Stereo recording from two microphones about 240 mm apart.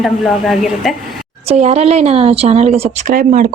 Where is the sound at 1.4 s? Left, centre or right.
Right.